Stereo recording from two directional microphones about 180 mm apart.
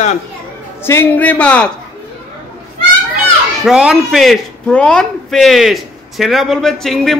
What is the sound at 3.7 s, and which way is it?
Speech, 5° right (ahead or behind).